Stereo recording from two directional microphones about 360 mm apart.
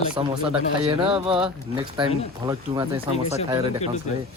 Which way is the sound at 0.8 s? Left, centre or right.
Centre.